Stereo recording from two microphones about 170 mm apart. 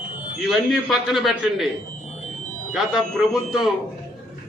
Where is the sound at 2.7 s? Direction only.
Centre (ahead or behind).